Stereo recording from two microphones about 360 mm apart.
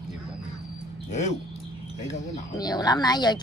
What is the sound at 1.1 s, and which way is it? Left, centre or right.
Speech, centre.